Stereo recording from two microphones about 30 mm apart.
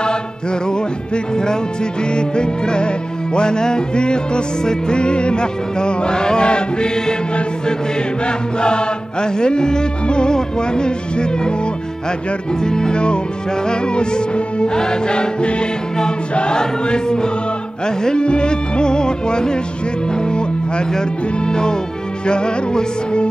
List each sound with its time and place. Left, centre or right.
0.7 s music: left
12.6 s music: left